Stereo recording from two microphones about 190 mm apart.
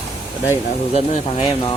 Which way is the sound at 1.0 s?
30° left (ahead or behind).